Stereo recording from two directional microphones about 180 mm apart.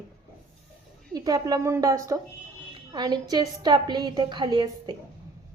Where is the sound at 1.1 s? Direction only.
20° right (ahead or behind).